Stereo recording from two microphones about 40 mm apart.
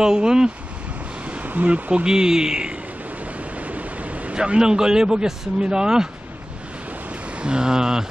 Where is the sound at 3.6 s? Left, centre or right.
Right.